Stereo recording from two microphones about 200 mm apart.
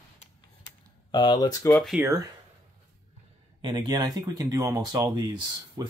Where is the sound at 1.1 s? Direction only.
20° left (ahead or behind).